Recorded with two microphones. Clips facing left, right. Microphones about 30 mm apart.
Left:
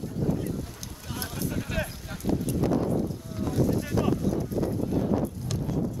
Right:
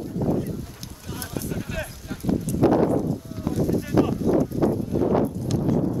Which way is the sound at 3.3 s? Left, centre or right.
Centre.